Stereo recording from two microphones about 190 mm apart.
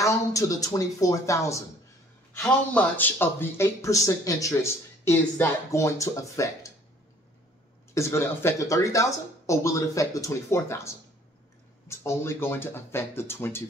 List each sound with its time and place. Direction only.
0.0 s speech: 15° left (ahead or behind)
7.9 s speech: 15° left (ahead or behind)